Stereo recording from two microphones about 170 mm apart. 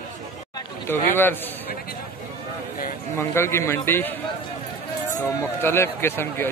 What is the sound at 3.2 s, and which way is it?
Speech, 15° left (ahead or behind).